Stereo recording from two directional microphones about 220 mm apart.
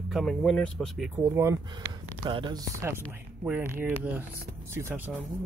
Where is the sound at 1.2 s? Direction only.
10° right (ahead or behind).